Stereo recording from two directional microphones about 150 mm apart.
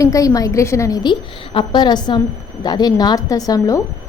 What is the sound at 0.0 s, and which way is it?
A woman's voice, 20° left (ahead or behind).